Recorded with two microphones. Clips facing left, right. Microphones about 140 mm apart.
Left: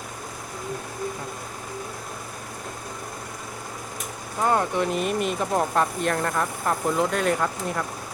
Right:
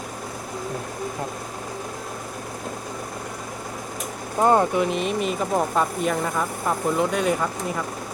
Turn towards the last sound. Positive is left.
turn(degrees=-5)  # may be behind; listen again after turning